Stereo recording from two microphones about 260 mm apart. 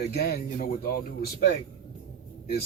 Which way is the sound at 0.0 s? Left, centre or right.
Left.